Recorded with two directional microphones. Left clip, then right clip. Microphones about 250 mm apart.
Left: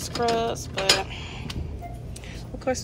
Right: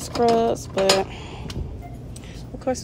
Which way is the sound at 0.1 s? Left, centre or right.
Right.